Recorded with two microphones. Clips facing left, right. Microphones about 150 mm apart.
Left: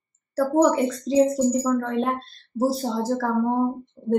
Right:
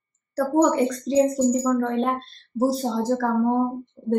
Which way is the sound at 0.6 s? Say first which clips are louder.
Even; centre (ahead or behind).